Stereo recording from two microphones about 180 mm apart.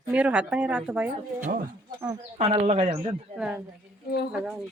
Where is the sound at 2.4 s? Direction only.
35° right (ahead or behind).